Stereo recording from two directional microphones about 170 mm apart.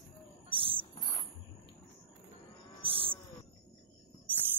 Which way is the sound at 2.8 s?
30° right (ahead or behind).